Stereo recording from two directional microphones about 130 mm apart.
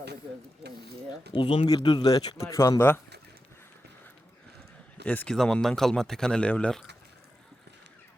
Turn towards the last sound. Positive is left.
turn(degrees=10)  # may be behind; listen again after turning